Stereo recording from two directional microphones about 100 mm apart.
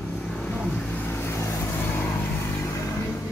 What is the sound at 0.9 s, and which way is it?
Vehicle, 20° left (ahead or behind).